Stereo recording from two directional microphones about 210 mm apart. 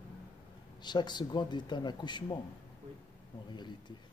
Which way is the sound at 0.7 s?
20° left (ahead or behind).